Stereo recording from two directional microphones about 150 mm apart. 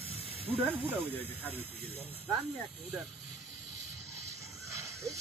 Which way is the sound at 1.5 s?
40° right (ahead or behind).